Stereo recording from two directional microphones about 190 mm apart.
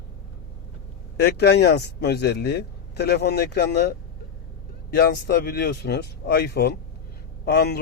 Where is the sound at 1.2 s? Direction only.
60° left (ahead or behind).